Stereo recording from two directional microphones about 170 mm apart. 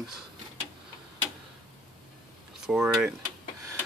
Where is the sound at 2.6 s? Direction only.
5° right (ahead or behind).